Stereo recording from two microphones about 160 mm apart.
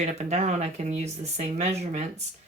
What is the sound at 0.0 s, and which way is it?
Speech, 45° right (ahead or behind).